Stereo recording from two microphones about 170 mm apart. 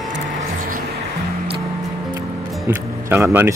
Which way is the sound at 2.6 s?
10° right (ahead or behind).